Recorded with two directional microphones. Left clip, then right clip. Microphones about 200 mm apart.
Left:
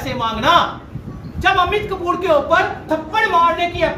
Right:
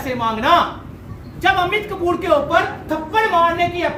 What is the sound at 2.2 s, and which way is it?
Speech, 5° left (ahead or behind).